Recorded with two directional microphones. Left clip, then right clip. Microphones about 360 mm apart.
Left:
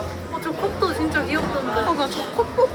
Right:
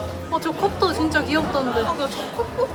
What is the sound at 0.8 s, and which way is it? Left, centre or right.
Music, centre.